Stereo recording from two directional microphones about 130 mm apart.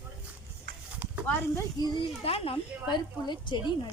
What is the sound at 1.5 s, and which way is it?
Speech, 30° left (ahead or behind).